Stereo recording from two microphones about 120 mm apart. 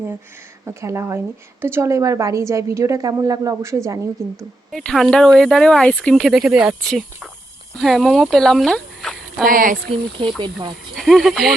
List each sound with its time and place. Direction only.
0.6 s a woman's voice: 25° right (ahead or behind)
4.7 s speech: 5° left (ahead or behind)
9.8 s speech: 50° right (ahead or behind)
10.9 s speech: centre (ahead or behind)